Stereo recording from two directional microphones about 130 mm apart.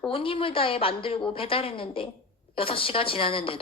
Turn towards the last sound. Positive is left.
turn(degrees=45)  # may be behind; listen again after turning